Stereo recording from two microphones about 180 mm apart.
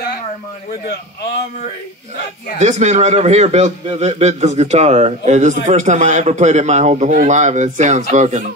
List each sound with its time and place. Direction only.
2.6 s a man's voice: 40° right (ahead or behind)